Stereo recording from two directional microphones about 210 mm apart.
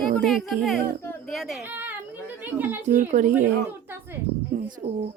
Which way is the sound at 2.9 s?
40° right (ahead or behind).